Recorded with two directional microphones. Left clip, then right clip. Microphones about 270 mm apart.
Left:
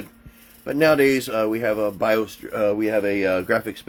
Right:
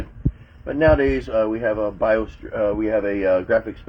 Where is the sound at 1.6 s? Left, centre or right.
Left.